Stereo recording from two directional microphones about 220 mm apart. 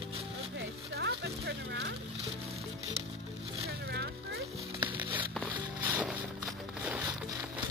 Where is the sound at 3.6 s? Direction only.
50° right (ahead or behind).